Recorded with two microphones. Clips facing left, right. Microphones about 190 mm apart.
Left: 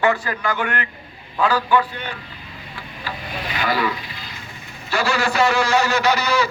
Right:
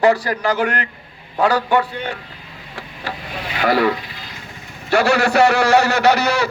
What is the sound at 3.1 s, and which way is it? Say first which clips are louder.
Rub: right 3 dB; 80° right.